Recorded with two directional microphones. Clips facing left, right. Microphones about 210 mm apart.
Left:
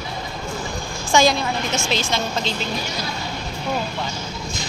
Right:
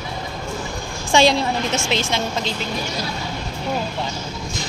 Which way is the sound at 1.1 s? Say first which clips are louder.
Right 1 dB; 30° right (ahead or behind).